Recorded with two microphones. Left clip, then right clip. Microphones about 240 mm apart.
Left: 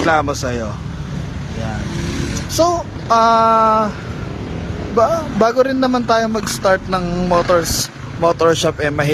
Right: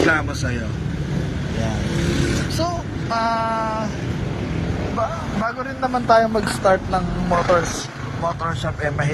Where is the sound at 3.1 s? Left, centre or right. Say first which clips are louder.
Left 10 dB; left.